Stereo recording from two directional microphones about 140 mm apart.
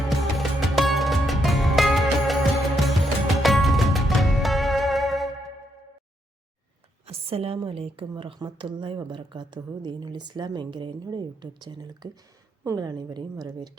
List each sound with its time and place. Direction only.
0.1 s music: centre (ahead or behind)
7.0 s a woman's voice: 45° right (ahead or behind); by 13.7 s 30° right (ahead or behind)